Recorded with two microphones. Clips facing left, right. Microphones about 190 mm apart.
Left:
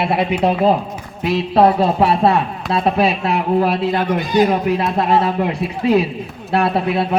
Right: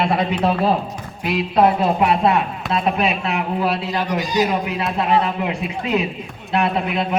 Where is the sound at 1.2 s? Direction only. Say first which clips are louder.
Left 3 dB; 30° left (ahead or behind).